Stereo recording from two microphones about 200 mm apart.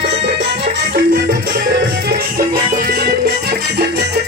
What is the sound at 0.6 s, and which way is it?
Music, 50° right (ahead or behind).